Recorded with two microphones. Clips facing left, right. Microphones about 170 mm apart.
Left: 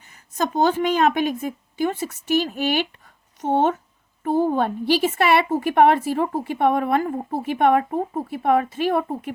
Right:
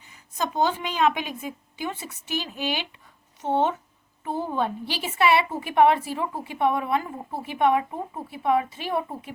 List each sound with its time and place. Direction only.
0.1 s a woman's voice: 45° left (ahead or behind)